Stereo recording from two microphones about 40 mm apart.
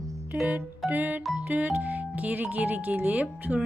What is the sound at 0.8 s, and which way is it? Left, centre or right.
Speech, right.